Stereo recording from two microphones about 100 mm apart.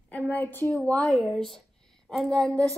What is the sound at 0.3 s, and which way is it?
A woman's voice, 20° left (ahead or behind).